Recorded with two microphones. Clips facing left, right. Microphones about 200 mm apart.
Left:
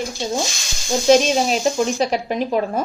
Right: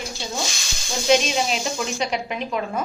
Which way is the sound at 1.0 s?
40° left (ahead or behind).